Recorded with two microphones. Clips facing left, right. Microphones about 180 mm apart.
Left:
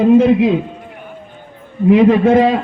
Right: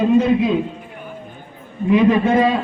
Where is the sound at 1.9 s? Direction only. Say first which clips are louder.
Left 5 dB; 75° left (ahead or behind).